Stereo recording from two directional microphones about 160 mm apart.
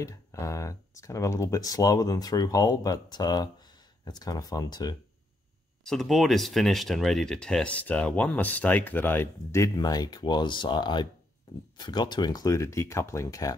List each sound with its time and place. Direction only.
0.0 s speech: 20° left (ahead or behind)
5.9 s speech: centre (ahead or behind); by 13.6 s 20° left (ahead or behind)